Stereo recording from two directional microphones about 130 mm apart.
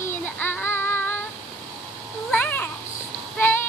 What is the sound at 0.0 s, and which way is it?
Child singing, 15° left (ahead or behind).